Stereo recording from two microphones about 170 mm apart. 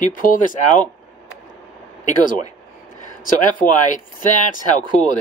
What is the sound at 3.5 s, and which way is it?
Speech, 50° left (ahead or behind).